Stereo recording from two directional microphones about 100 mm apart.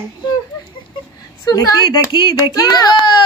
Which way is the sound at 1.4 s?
40° left (ahead or behind).